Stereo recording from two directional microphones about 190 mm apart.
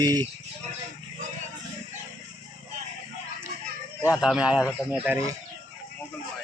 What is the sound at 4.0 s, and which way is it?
Speech, 15° left (ahead or behind).